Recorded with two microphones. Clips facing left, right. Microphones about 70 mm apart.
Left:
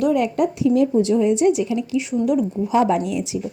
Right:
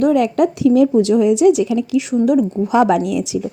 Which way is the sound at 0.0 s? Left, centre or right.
Right.